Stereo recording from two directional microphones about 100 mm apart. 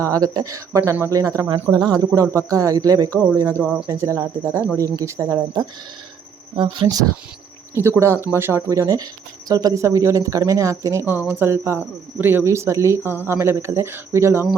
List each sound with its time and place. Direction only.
0.0 s a woman's voice: 35° right (ahead or behind)
1.7 s a woman's voice: 40° right (ahead or behind)
3.6 s speech: 5° right (ahead or behind)
3.8 s a woman's voice: 30° right (ahead or behind)
6.8 s a woman's voice: 30° right (ahead or behind)